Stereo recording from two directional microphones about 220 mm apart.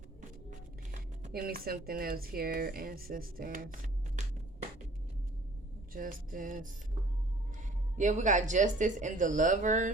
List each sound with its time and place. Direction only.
0.9 s speech: 40° right (ahead or behind)
5.9 s speech: 40° right (ahead or behind)
7.9 s speech: 35° right (ahead or behind)